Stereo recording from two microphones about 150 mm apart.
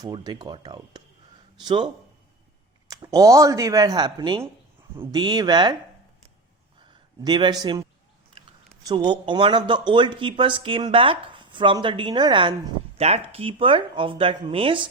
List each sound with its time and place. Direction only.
0.0 s speech: 25° right (ahead or behind)
2.9 s speech: 25° right (ahead or behind)
7.3 s speech: 30° right (ahead or behind)
8.9 s speech: 30° right (ahead or behind)
13.0 s speech: 45° right (ahead or behind)